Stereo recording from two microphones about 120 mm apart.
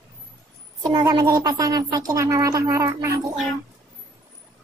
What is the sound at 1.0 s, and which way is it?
Speech, 35° right (ahead or behind).